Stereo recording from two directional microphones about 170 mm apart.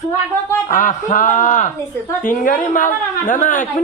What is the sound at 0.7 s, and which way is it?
A woman's voice, 50° left (ahead or behind).